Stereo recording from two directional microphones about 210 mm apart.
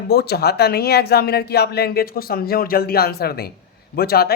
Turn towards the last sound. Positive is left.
turn(degrees=45)  # may be behind; listen again after turning